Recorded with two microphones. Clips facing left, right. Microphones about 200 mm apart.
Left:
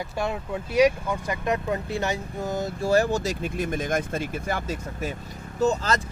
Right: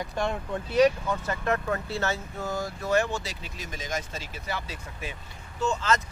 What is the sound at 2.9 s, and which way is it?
Speech, 40° left (ahead or behind).